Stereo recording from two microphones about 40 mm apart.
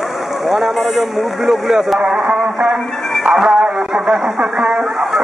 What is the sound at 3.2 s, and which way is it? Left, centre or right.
Music, centre.